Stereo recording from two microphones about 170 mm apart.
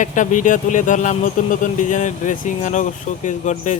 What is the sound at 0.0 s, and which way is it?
Speech, 50° left (ahead or behind).